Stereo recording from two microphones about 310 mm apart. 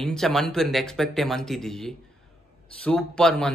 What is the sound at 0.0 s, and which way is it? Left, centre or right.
Speech, centre.